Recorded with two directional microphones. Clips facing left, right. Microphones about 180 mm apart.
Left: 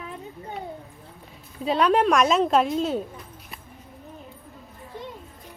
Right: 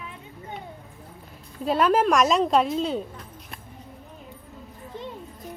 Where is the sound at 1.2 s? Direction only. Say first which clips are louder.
Even; centre (ahead or behind).